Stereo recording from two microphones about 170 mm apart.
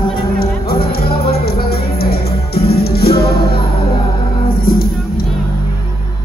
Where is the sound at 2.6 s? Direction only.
65° left (ahead or behind).